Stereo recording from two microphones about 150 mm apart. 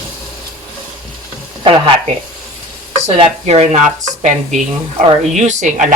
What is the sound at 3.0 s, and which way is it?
Speech, 45° right (ahead or behind).